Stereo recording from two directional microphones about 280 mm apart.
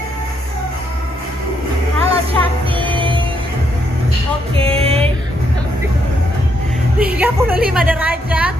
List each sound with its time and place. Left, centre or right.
2.0 s music: centre
4.6 s music: right
7.0 s a sound: centre
7.9 s a woman's voice: centre